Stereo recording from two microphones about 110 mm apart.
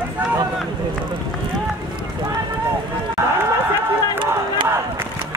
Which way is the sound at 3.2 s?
25° right (ahead or behind).